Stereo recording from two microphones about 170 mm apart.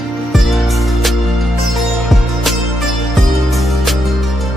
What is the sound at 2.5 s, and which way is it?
Music, centre (ahead or behind).